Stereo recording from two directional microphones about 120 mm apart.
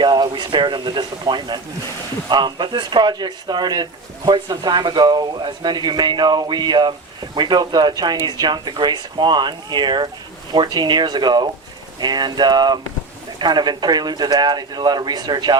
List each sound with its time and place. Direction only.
0.0 s speech: 40° right (ahead or behind)